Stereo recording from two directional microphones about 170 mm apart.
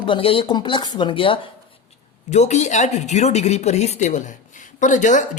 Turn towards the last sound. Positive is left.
turn(degrees=45)  # may be behind; listen again after turning